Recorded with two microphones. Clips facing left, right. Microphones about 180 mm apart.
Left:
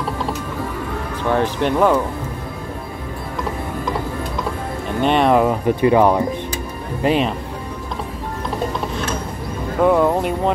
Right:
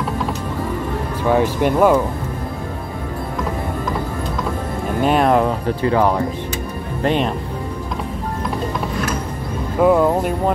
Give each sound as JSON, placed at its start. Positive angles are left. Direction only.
{"t": 1.3, "sound": "speech", "side_deg": -10}
{"t": 5.0, "sound": "speech", "side_deg": 0}
{"t": 5.7, "sound": "speech", "side_deg": 15}
{"t": 7.0, "sound": "speech", "side_deg": 5}
{"t": 9.8, "sound": "speech", "side_deg": 0}